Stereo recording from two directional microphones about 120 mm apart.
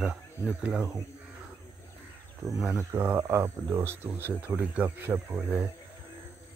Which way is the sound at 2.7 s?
20° right (ahead or behind).